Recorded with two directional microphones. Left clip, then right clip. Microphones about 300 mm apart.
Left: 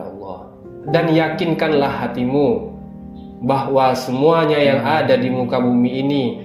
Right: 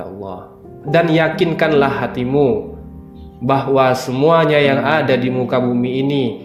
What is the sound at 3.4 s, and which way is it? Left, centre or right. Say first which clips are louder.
Speech: right 2 dB; right.